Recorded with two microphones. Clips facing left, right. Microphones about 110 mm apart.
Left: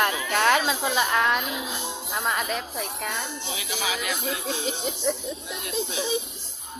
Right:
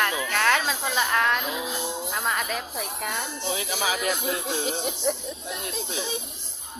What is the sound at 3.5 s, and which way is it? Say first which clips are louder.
Speech: right 3 dB; 40° right (ahead or behind).